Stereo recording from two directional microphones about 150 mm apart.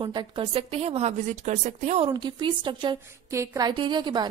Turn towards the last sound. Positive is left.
turn(degrees=-30)  # may be behind; listen again after turning